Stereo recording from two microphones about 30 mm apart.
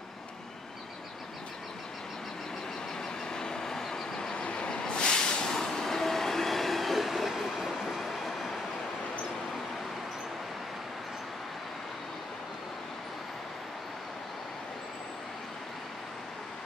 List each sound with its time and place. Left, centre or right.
3.3 s train: left
4.4 s vehicle: left
5.5 s train: centre